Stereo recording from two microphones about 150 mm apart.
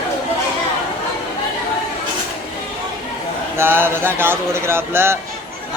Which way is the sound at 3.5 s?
15° right (ahead or behind).